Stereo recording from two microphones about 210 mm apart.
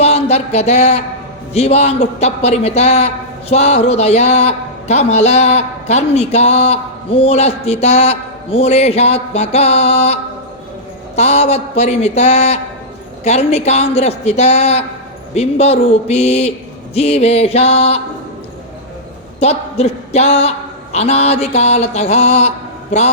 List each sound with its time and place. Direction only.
0.0 s a sound: 30° left (ahead or behind)
1.5 s a man's voice: 30° left (ahead or behind)
16.9 s music: 30° left (ahead or behind)
19.4 s a man's voice: 30° left (ahead or behind)